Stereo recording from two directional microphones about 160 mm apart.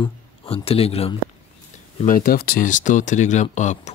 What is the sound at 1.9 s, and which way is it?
Speech, 55° left (ahead or behind).